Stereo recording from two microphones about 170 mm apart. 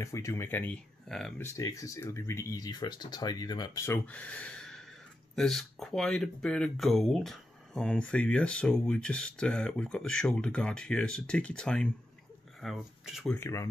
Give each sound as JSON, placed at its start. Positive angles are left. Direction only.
{"t": 0.0, "sound": "speech", "side_deg": 15}
{"t": 1.4, "sound": "speech", "side_deg": 20}
{"t": 13.3, "sound": "speech", "side_deg": 15}